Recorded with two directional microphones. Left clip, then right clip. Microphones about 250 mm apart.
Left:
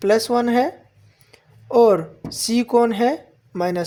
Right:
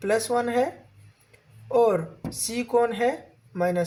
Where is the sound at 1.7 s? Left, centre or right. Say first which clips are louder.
Left 7 dB; left.